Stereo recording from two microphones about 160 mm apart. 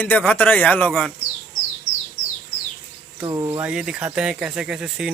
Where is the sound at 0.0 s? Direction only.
10° left (ahead or behind).